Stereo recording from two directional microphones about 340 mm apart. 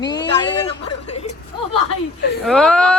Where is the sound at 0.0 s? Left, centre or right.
Centre.